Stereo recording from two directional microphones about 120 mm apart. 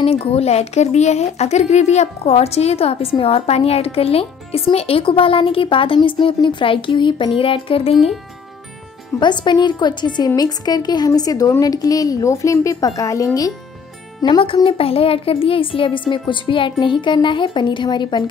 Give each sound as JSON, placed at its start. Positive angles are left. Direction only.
{"t": 0.0, "sound": "a woman's voice", "side_deg": 55}
{"t": 9.2, "sound": "a woman's voice", "side_deg": 40}
{"t": 14.4, "sound": "a woman's voice", "side_deg": 45}